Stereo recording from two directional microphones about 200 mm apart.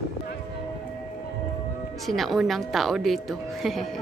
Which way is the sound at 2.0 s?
Centre (ahead or behind).